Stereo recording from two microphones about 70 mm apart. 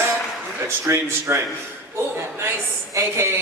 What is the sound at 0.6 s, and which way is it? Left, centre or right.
A woman's voice, right.